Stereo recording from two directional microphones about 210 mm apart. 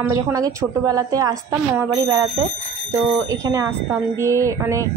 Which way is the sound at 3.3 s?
15° right (ahead or behind).